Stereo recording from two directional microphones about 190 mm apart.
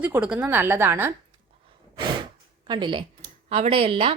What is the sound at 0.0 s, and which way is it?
A woman's voice, 5° right (ahead or behind).